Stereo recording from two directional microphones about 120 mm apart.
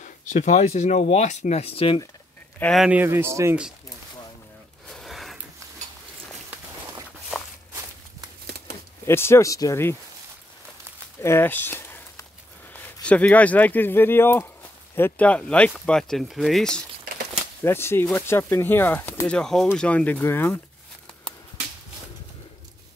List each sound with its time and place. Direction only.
0.0 s speech: 85° left; by 2.0 s 55° left (ahead or behind)
2.9 s speech: 20° right (ahead or behind)
4.9 s a sound: centre (ahead or behind)
9.0 s speech: 20° left (ahead or behind)
11.1 s a sound: 20° left (ahead or behind)
13.0 s speech: 10° left (ahead or behind)
17.6 s speech: 20° left (ahead or behind)
19.2 s speech: 5° left (ahead or behind)